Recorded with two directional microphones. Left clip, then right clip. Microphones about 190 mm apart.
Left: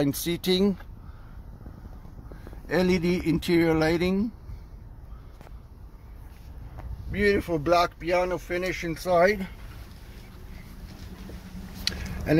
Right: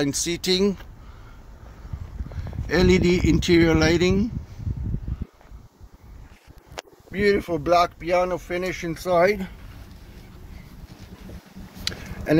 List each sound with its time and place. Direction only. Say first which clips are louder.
0.0 s speech: right 3 dB; 5° left (ahead or behind)
2.6 s speech: right 5 dB; 5° right (ahead or behind)
7.1 s speech: right 3 dB; 15° right (ahead or behind)
11.8 s a sound: right 1 dB; 15° right (ahead or behind)